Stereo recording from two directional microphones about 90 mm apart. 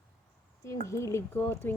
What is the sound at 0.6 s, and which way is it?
Speech, 35° left (ahead or behind).